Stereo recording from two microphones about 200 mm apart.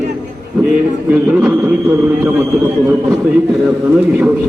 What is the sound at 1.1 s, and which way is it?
A man's voice, 5° right (ahead or behind).